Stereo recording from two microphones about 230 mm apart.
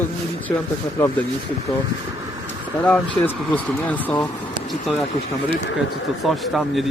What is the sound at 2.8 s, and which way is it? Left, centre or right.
Speech, centre.